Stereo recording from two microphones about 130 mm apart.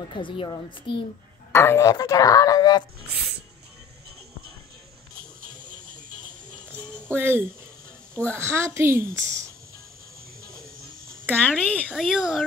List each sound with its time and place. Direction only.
0.1 s a child's voice: 40° left (ahead or behind)
1.5 s speech: 20° left (ahead or behind)
7.2 s a woman's voice: 15° right (ahead or behind)
11.3 s speech: 10° left (ahead or behind)
11.8 s speech: 5° right (ahead or behind)